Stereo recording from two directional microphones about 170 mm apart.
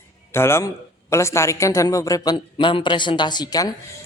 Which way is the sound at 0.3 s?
15° left (ahead or behind).